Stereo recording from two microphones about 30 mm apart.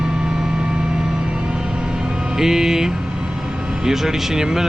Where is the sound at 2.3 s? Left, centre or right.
Centre.